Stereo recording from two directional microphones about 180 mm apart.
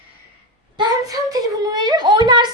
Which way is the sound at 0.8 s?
20° right (ahead or behind).